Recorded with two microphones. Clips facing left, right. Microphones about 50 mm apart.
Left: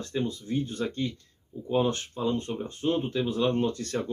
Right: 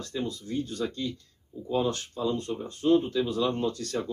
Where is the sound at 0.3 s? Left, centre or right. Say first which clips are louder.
Left 2 dB; left.